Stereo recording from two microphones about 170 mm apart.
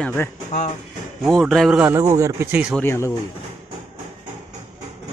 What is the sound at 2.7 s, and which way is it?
Speech, 15° left (ahead or behind).